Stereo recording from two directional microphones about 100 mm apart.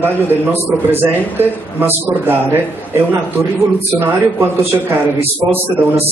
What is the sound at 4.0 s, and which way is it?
Speech, 20° right (ahead or behind).